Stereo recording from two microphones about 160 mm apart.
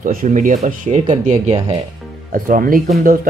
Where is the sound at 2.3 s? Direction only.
60° right (ahead or behind).